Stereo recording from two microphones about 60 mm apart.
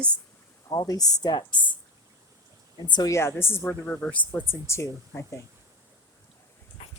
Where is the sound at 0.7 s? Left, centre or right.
Left.